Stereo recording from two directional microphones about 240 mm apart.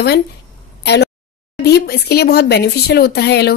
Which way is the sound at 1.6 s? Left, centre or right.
Left.